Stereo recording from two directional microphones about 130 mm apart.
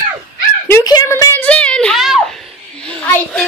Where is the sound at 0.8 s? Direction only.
30° left (ahead or behind); by 3.0 s 5° left (ahead or behind).